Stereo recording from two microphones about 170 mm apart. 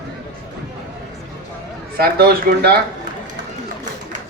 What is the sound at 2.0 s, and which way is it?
Speech, 65° right (ahead or behind).